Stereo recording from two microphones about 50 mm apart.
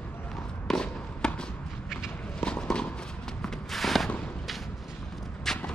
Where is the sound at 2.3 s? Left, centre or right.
Left.